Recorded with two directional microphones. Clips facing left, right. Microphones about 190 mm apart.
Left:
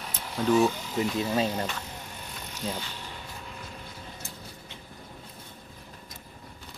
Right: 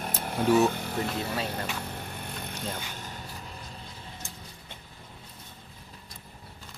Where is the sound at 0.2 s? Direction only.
55° right (ahead or behind).